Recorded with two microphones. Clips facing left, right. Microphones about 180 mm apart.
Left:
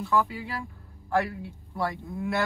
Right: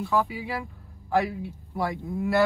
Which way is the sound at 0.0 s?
10° right (ahead or behind).